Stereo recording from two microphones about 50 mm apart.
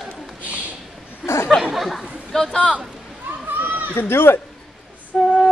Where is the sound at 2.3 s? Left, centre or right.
Centre.